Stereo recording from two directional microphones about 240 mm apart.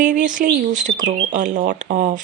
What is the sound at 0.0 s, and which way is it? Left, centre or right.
Speech, right.